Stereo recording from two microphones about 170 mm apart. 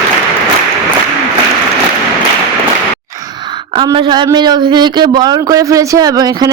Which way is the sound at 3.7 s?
30° right (ahead or behind).